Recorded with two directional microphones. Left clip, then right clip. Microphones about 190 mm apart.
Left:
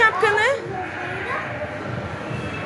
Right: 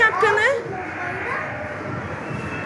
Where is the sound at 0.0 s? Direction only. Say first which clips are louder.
Even; 10° right (ahead or behind).